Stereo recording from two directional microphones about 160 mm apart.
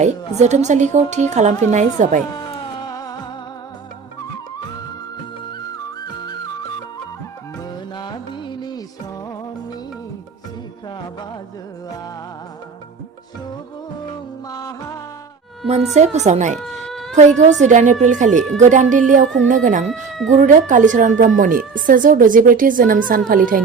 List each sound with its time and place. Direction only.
0.0 s a woman's voice: 45° right (ahead or behind)
2.8 s music: 25° left (ahead or behind)
7.9 s music: 30° left (ahead or behind)
14.5 s music: 20° left (ahead or behind)
16.0 s a woman's voice: 45° right (ahead or behind)